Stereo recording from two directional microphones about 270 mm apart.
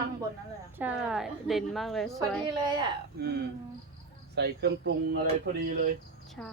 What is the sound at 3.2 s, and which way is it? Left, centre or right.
Speech, right.